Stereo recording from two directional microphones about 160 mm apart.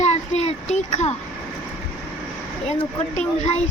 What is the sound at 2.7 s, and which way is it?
Speech, 45° left (ahead or behind).